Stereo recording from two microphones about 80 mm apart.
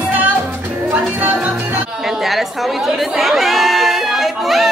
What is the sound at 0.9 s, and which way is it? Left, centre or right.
Music, centre.